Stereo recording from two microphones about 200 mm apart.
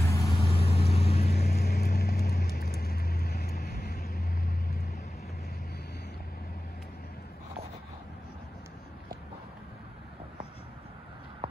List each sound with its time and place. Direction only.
0.0 s vehicle: 15° left (ahead or behind); by 1.3 s 30° left (ahead or behind)
1.3 s vehicle: 50° left (ahead or behind)